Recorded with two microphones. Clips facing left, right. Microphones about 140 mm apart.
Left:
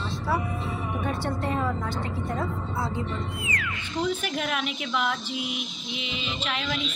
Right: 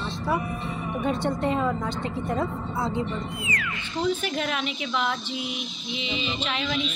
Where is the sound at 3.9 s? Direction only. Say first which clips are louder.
Right 2 dB; 5° left (ahead or behind).